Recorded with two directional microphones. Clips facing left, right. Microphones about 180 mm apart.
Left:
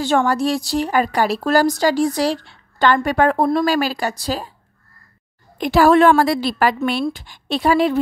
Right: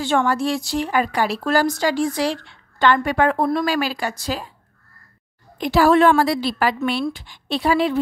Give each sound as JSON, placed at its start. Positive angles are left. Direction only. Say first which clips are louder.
{"t": 0.0, "sound": "a woman's voice", "louder": "left 2 dB", "side_deg": 40}
{"t": 5.6, "sound": "a woman's voice", "louder": "left 2 dB", "side_deg": 50}